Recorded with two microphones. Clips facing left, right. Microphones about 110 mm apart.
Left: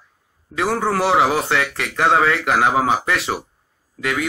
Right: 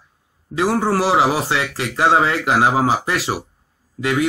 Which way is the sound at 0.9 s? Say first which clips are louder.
Left 2 dB; 5° right (ahead or behind).